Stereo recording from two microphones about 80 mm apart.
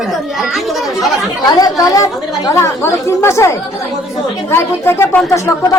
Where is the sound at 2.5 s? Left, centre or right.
Left.